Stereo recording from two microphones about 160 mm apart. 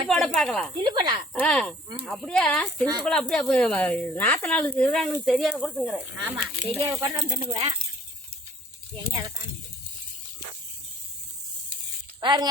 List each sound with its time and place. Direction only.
0.1 s speech: 5° left (ahead or behind)
0.9 s speech: 25° right (ahead or behind)
1.3 s speech: 5° left (ahead or behind)
6.7 s speech: 20° right (ahead or behind)
9.0 s speech: 20° right (ahead or behind)
12.2 s speech: 30° right (ahead or behind)